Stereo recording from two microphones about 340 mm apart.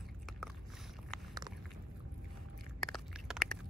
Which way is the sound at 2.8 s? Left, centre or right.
Centre.